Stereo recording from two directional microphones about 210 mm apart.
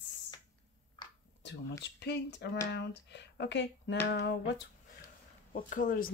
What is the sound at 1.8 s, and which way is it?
Speech, 55° left (ahead or behind).